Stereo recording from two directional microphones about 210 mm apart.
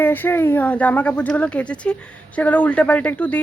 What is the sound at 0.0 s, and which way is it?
Speech, 10° left (ahead or behind).